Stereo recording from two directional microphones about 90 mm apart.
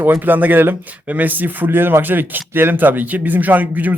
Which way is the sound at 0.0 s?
20° right (ahead or behind).